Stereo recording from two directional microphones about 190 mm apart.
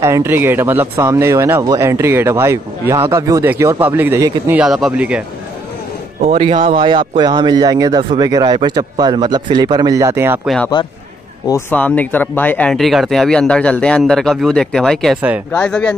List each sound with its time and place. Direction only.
0.0 s speech: 15° right (ahead or behind)
6.2 s a man's voice: 30° right (ahead or behind); by 10.5 s 10° right (ahead or behind)
11.4 s speech: 10° left (ahead or behind)